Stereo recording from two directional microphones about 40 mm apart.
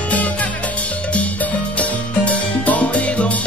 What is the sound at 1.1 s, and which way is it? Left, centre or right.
Music, left.